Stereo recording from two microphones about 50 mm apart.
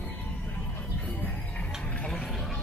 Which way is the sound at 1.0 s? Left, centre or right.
Left.